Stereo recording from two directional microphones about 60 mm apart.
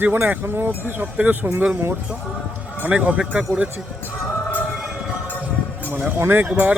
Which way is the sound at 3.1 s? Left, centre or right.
Centre.